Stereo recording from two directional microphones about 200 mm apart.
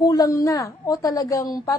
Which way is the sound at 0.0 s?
15° left (ahead or behind).